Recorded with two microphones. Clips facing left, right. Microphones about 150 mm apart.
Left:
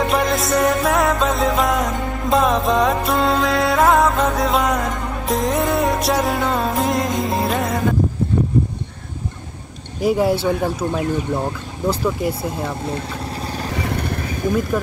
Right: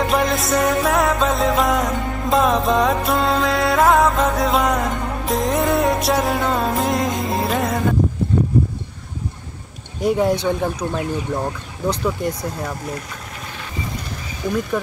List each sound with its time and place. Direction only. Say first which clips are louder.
0.0 s music: even; centre (ahead or behind)
9.9 s music: left 1 dB; centre (ahead or behind)
12.4 s speech: left 2 dB; 25° left (ahead or behind)
13.7 s vehicle: left 4 dB; 65° left (ahead or behind)